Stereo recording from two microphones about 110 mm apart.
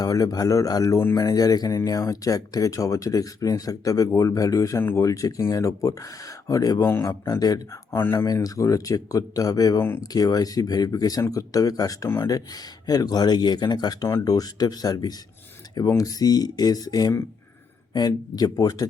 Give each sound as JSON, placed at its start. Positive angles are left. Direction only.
{"t": 0.0, "sound": "speech", "side_deg": 35}
{"t": 7.9, "sound": "speech", "side_deg": 20}